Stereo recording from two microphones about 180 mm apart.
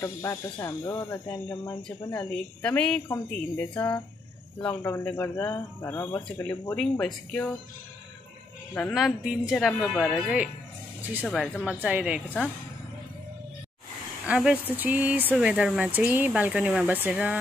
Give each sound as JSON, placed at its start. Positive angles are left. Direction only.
{"t": 0.0, "sound": "speech", "side_deg": 15}
{"t": 8.9, "sound": "speech", "side_deg": 0}
{"t": 11.8, "sound": "speech", "side_deg": -5}
{"t": 14.2, "sound": "speech", "side_deg": -5}